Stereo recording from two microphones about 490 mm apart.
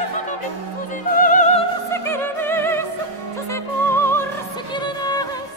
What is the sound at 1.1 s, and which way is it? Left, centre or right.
Music, centre.